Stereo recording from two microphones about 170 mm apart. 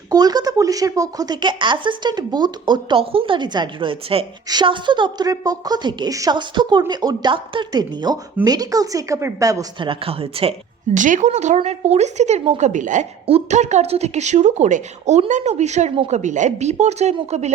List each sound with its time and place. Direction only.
0.1 s speech: 20° right (ahead or behind)
9.9 s speech: 35° right (ahead or behind)
10.9 s speech: 45° right (ahead or behind)